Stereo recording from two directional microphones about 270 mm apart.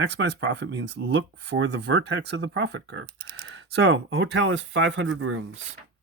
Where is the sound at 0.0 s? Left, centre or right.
Right.